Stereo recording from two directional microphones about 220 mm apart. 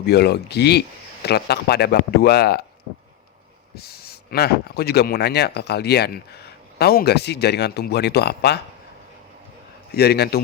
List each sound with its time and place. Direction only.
0.0 s speech: 45° left (ahead or behind)
3.8 s speech: 45° left (ahead or behind)
9.9 s speech: 45° left (ahead or behind)